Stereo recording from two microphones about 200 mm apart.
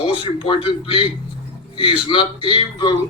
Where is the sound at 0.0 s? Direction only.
25° left (ahead or behind).